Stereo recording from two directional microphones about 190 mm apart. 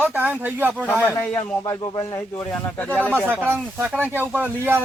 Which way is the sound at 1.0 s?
10° left (ahead or behind).